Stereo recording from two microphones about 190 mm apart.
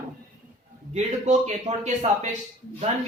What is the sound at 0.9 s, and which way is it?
A man's voice, 35° right (ahead or behind).